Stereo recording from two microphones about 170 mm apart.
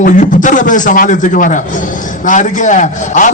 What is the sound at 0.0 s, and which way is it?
A man's voice, 50° left (ahead or behind).